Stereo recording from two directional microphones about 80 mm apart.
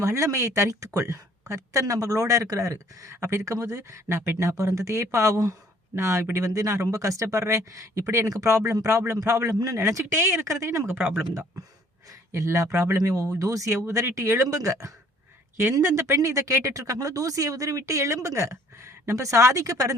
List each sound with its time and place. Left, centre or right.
0.0 s a man's voice: right
12.3 s speech: right